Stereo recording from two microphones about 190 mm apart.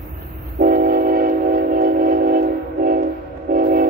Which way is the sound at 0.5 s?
50° right (ahead or behind).